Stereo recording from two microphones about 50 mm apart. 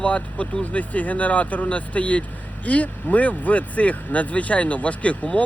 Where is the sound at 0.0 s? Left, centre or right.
Left.